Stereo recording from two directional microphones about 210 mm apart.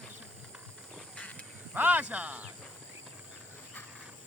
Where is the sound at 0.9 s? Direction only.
5° left (ahead or behind).